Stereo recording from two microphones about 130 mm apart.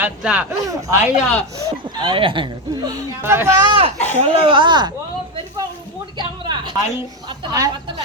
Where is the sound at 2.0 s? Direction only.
40° right (ahead or behind).